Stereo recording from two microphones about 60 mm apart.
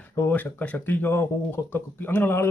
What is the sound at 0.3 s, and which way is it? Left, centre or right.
Speech, left.